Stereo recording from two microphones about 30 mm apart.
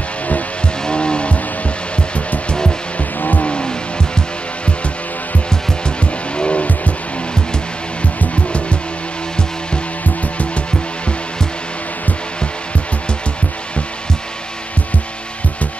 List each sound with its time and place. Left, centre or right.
0.8 s vehicle: left
3.2 s vehicle: left
3.4 s vehicle: left
6.3 s vehicle: left